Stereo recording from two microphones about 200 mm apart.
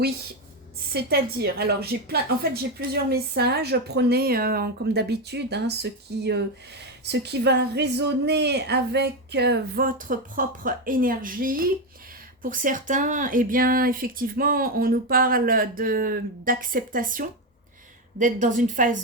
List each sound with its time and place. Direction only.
0.9 s a woman's voice: 50° right (ahead or behind)